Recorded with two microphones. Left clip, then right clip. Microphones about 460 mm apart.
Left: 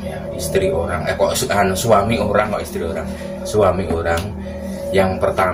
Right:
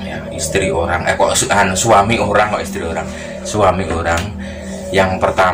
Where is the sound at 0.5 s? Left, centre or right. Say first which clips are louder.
Right 2 dB; left.